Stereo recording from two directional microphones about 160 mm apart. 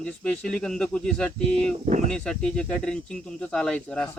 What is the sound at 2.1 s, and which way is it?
Speech, 5° left (ahead or behind).